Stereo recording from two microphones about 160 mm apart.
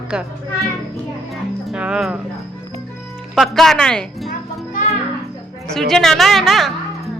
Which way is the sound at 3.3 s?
Centre (ahead or behind).